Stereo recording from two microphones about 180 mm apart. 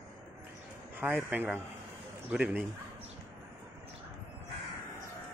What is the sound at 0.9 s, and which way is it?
Speech, 10° right (ahead or behind).